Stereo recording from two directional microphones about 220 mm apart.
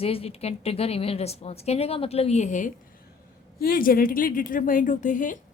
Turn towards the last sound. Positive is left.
turn(degrees=35)  # may be behind; listen again after turning